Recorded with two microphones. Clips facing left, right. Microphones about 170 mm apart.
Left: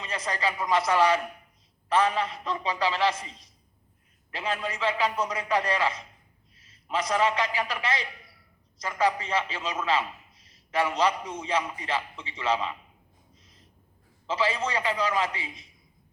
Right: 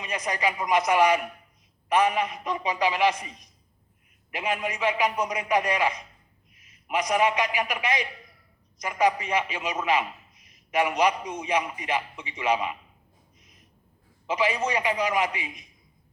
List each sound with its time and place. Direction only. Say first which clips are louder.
0.0 s a man's voice: right 2 dB; 15° right (ahead or behind)
13.4 s a sound: even; 15° right (ahead or behind)
14.3 s a man's voice: right 2 dB; 15° right (ahead or behind)